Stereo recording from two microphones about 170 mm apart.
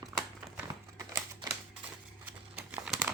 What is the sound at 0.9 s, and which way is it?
Typewriter, 20° right (ahead or behind).